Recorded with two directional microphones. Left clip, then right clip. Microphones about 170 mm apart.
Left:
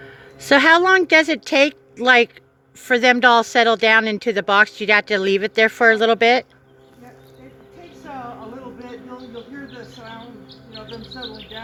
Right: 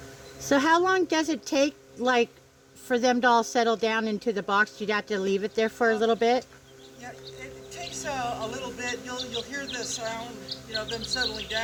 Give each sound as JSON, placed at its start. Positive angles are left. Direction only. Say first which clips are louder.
{"t": 0.5, "sound": "speech", "louder": "left 9 dB", "side_deg": 20}